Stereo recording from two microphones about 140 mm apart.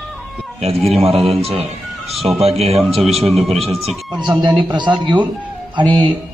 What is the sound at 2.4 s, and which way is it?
Speech, 45° right (ahead or behind).